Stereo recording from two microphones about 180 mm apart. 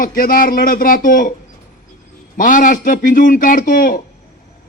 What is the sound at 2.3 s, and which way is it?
A man's voice, 50° left (ahead or behind).